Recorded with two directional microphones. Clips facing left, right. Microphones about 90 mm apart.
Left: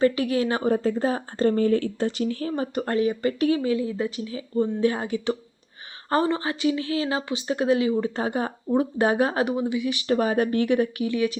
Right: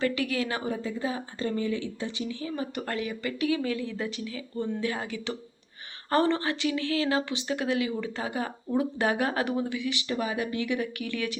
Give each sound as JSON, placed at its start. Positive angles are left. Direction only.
{"t": 0.0, "sound": "speech", "side_deg": 30}
{"t": 0.6, "sound": "speech", "side_deg": 55}
{"t": 2.7, "sound": "speech", "side_deg": 30}
{"t": 3.6, "sound": "speech", "side_deg": 20}
{"t": 6.2, "sound": "speech", "side_deg": 15}
{"t": 8.1, "sound": "speech", "side_deg": 40}
{"t": 10.1, "sound": "speech", "side_deg": 45}
{"t": 10.9, "sound": "speech", "side_deg": 20}